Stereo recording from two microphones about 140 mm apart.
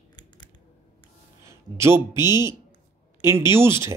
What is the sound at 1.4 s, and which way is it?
Speech, 20° right (ahead or behind).